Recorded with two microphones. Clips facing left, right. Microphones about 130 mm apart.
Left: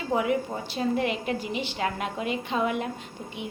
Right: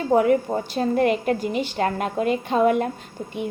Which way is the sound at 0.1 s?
45° right (ahead or behind).